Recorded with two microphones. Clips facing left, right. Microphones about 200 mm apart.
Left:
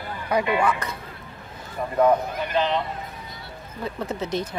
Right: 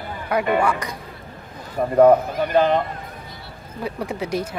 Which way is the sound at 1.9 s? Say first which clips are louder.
Right 6 dB; 50° right (ahead or behind).